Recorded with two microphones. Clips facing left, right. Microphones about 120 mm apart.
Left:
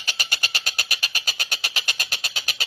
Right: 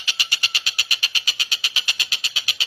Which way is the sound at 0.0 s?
45° left (ahead or behind).